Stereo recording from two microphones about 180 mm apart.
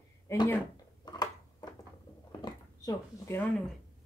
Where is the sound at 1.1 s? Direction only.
20° left (ahead or behind).